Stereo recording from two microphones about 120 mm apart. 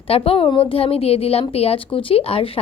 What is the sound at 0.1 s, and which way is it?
A woman's voice, 50° left (ahead or behind).